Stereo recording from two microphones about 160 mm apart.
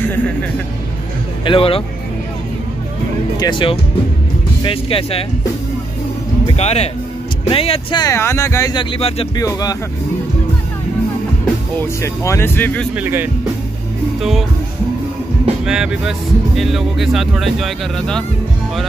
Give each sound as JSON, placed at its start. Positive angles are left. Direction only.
{"t": 0.1, "sound": "speech", "side_deg": 10}
{"t": 1.4, "sound": "speech", "side_deg": 35}
{"t": 3.3, "sound": "speech", "side_deg": 30}
{"t": 6.5, "sound": "speech", "side_deg": 40}
{"t": 8.0, "sound": "speech", "side_deg": 15}
{"t": 8.7, "sound": "speech", "side_deg": 35}
{"t": 9.4, "sound": "speech", "side_deg": 20}
{"t": 12.0, "sound": "speech", "side_deg": 20}
{"t": 12.9, "sound": "speech", "side_deg": -10}
{"t": 15.6, "sound": "speech", "side_deg": -5}